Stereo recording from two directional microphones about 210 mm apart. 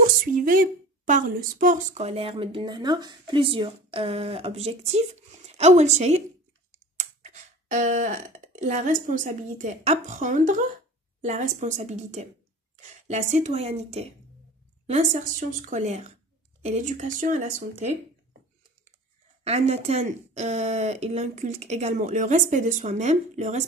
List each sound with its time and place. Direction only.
0.0 s a woman's voice: 40° right (ahead or behind)
7.0 s a sound: 35° right (ahead or behind)
8.5 s speech: 35° right (ahead or behind)
19.4 s speech: 30° right (ahead or behind)